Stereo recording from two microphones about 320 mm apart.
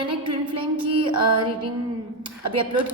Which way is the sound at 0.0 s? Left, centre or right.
Centre.